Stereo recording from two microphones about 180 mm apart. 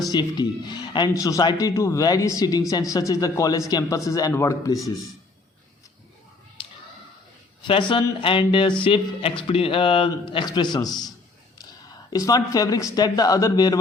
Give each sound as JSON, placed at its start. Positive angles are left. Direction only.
{"t": 0.1, "sound": "a man's voice", "side_deg": 25}
{"t": 6.6, "sound": "a sound", "side_deg": 30}
{"t": 7.7, "sound": "a man's voice", "side_deg": 25}
{"t": 12.1, "sound": "a man's voice", "side_deg": 20}